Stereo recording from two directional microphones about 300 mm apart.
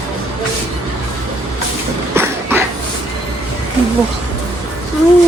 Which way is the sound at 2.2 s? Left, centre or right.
Centre.